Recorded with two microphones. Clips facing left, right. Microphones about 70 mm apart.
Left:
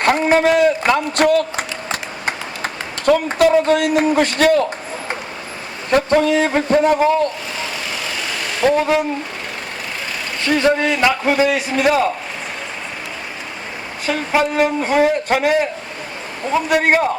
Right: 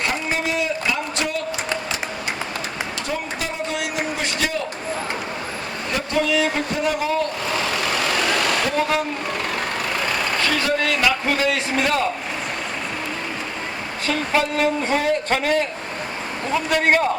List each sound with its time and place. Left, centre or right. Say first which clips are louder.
0.0 s a man's voice: left 10 dB; left
3.1 s a woman's voice: left 17 dB; left
3.7 s speech: left 10 dB; left
5.9 s speech: left 7 dB; left
7.7 s vehicle: right 4 dB; right
9.9 s vehicle: right 3 dB; right
10.4 s a man's voice: left 9 dB; left
11.8 s a man's voice: left 7 dB; centre
14.1 s speech: left 4 dB; centre